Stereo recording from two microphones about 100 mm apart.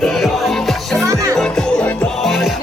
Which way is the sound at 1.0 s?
35° right (ahead or behind).